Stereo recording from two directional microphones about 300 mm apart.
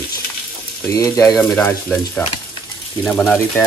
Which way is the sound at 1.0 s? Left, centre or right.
Centre.